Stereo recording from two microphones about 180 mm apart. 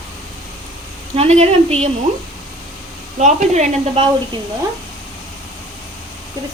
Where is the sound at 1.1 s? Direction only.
35° right (ahead or behind).